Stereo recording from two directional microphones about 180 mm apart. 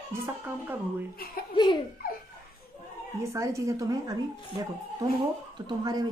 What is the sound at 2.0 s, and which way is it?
Laughter, 55° left (ahead or behind).